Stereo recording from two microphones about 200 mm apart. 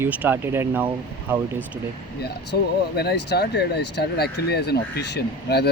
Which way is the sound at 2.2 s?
55° left (ahead or behind).